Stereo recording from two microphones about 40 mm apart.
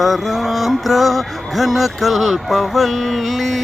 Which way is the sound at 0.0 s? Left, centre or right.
Centre.